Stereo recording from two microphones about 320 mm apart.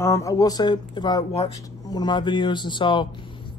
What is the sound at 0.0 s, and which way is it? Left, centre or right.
Speech, centre.